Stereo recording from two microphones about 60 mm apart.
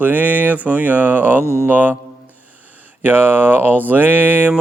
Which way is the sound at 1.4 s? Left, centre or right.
Left.